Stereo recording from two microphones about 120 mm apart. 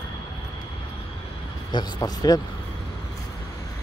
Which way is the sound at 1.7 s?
35° left (ahead or behind).